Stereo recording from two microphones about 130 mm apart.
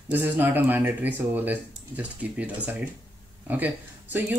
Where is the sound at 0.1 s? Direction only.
15° right (ahead or behind).